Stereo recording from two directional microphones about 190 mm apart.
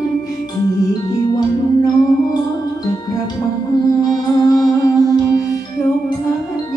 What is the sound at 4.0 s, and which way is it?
Music, 20° left (ahead or behind).